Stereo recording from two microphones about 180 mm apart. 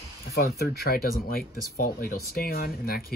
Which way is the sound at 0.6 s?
60° left (ahead or behind).